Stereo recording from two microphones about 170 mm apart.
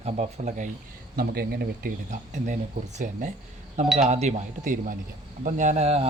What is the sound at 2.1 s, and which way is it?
Speech, 45° right (ahead or behind).